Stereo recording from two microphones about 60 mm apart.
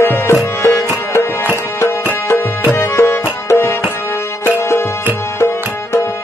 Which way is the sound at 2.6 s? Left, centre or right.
Left.